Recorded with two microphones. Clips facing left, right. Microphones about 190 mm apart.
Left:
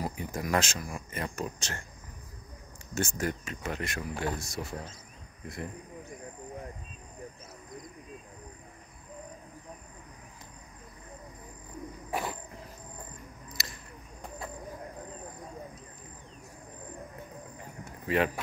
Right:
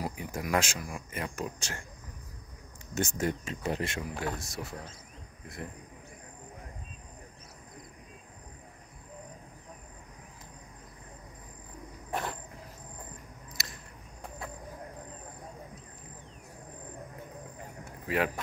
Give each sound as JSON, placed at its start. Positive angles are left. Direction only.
{"t": 0.0, "sound": "speech", "side_deg": -10}
{"t": 2.9, "sound": "speech", "side_deg": -20}
{"t": 4.1, "sound": "speech", "side_deg": 0}
{"t": 12.1, "sound": "a sound", "side_deg": 5}
{"t": 13.6, "sound": "a sound", "side_deg": 0}
{"t": 18.0, "sound": "speech", "side_deg": -5}